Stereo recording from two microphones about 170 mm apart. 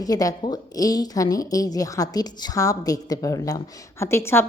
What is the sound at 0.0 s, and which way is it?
A woman's voice, 20° left (ahead or behind).